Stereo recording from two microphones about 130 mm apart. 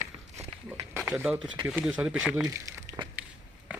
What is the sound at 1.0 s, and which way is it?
Speech, 10° right (ahead or behind).